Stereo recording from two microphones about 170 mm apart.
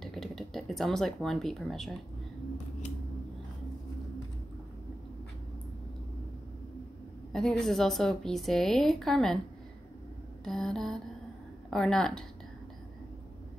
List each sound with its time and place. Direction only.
0.0 s speech: centre (ahead or behind)
7.3 s a woman's voice: centre (ahead or behind)
10.4 s a woman's voice: 5° left (ahead or behind)